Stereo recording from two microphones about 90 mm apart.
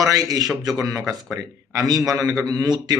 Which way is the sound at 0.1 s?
45° right (ahead or behind).